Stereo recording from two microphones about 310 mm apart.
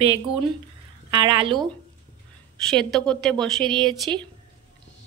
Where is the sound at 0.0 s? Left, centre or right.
Centre.